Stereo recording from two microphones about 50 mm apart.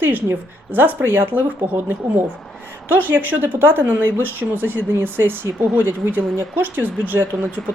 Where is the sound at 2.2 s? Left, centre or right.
Centre.